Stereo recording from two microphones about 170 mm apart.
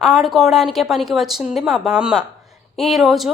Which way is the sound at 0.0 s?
Centre (ahead or behind).